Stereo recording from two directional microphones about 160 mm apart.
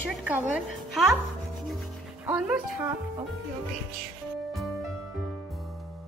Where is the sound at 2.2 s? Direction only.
10° right (ahead or behind).